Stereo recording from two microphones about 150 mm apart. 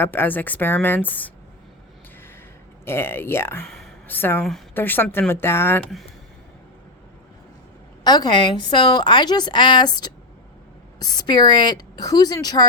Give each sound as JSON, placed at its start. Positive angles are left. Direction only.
{"t": 0.0, "sound": "a woman's voice", "side_deg": 15}
{"t": 2.8, "sound": "a woman's voice", "side_deg": 15}
{"t": 3.7, "sound": "a sound", "side_deg": 5}
{"t": 4.2, "sound": "a woman's voice", "side_deg": 15}
{"t": 8.0, "sound": "a woman's voice", "side_deg": 25}